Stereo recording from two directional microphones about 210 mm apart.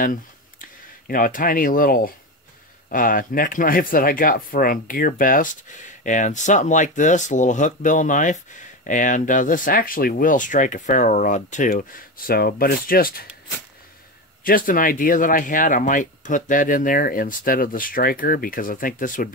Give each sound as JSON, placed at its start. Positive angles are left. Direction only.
{"t": 0.0, "sound": "speech", "side_deg": 40}
{"t": 14.4, "sound": "speech", "side_deg": 40}